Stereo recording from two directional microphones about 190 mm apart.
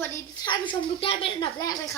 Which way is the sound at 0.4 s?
25° left (ahead or behind).